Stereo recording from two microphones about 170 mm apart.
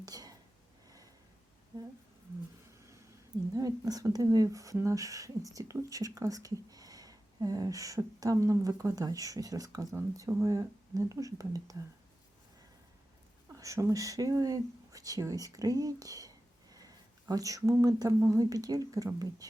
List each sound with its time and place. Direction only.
0.0 s whispering: 20° right (ahead or behind)
3.5 s speech: 20° right (ahead or behind)
13.5 s speech: 15° right (ahead or behind)